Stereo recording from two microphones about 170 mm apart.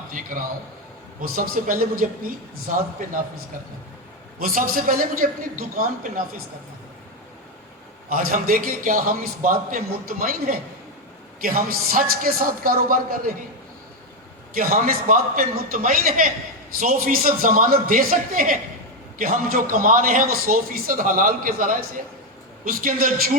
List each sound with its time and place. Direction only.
0.1 s a man's voice: 50° right (ahead or behind)
4.4 s a man's voice: 55° right (ahead or behind)
8.1 s a man's voice: 55° right (ahead or behind)
14.5 s a man's voice: 50° right (ahead or behind)